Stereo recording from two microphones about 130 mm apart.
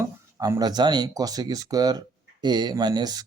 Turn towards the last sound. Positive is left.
turn(degrees=-30)  # may be behind; listen again after turning